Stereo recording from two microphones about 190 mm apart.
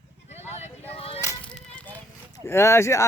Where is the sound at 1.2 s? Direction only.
15° left (ahead or behind).